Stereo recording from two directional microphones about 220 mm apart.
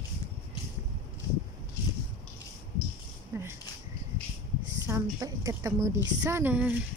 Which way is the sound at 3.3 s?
10° right (ahead or behind).